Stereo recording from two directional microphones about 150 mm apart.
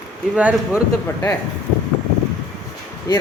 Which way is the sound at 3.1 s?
25° left (ahead or behind).